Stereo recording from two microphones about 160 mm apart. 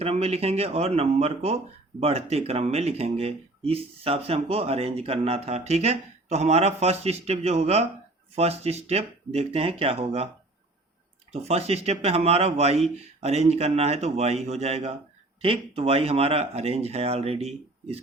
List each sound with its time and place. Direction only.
0.0 s speech: 40° right (ahead or behind)
11.3 s speech: 40° right (ahead or behind)